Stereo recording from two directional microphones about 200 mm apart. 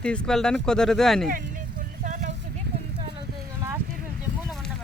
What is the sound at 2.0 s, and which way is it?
Vehicle, 40° right (ahead or behind).